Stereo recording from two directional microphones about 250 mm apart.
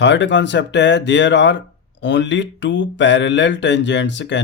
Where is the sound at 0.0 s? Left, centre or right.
Left.